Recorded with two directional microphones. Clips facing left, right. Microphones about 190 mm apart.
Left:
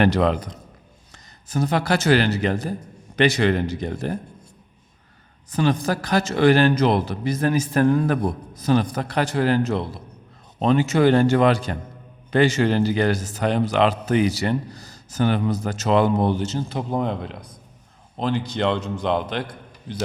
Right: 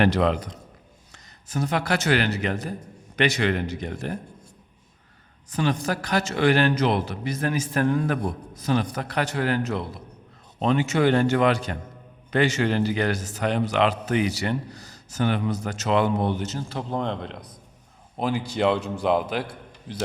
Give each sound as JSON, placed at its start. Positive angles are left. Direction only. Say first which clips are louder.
{"t": 0.0, "sound": "a man's voice", "louder": "left 2 dB", "side_deg": 45}
{"t": 5.5, "sound": "a man's voice", "louder": "left 4 dB", "side_deg": 35}
{"t": 16.7, "sound": "speech", "louder": "left 2 dB", "side_deg": 10}
{"t": 18.2, "sound": "a man's voice", "louder": "left 1 dB", "side_deg": -5}